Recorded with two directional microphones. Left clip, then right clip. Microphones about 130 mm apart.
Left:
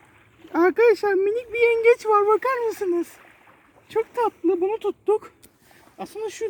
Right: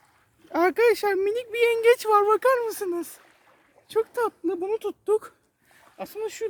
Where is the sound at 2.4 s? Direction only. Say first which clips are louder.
Right 1 dB; 45° right (ahead or behind).